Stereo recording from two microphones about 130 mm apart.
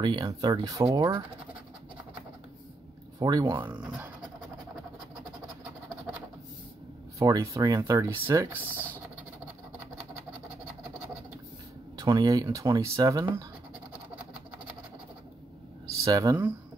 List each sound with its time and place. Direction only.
0.0 s speech: 35° right (ahead or behind)
3.2 s speech: 30° right (ahead or behind)
7.2 s speech: 25° right (ahead or behind)
8.7 s a sound: 15° left (ahead or behind)
12.0 s speech: 30° right (ahead or behind)
15.9 s speech: 25° right (ahead or behind)